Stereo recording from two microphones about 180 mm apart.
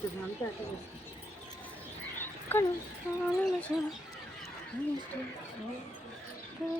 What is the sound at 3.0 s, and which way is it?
Speech, 15° left (ahead or behind).